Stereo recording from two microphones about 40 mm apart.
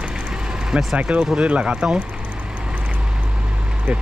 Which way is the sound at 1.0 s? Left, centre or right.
Right.